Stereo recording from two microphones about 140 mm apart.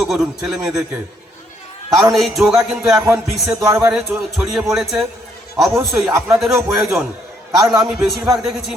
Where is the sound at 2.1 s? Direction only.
Centre (ahead or behind).